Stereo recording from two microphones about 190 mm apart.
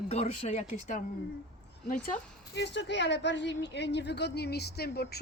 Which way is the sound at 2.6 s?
65° left (ahead or behind).